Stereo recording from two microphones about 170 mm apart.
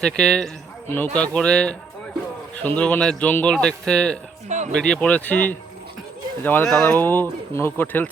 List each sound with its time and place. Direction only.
0.0 s a man's voice: 5° left (ahead or behind)
4.4 s a sound: 45° right (ahead or behind)
4.7 s speech: 5° left (ahead or behind)